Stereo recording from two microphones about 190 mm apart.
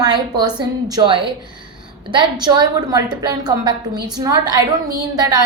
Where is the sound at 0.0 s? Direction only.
20° right (ahead or behind).